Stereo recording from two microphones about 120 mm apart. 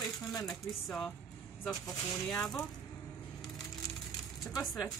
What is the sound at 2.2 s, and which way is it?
Speech, 5° left (ahead or behind).